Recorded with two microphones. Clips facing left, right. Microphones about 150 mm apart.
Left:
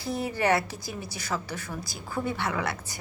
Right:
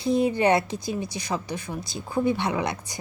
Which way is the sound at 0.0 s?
20° right (ahead or behind).